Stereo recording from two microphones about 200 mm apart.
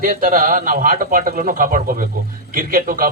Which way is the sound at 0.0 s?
40° right (ahead or behind).